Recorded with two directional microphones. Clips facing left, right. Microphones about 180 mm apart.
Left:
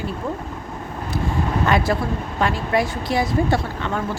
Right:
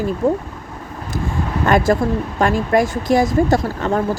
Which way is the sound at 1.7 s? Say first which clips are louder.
Right 8 dB; 45° right (ahead or behind).